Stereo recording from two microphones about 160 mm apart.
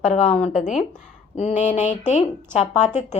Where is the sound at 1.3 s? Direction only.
45° left (ahead or behind).